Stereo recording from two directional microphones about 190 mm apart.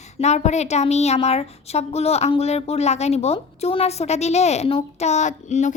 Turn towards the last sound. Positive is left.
turn(degrees=40)  # may be behind; listen again after turning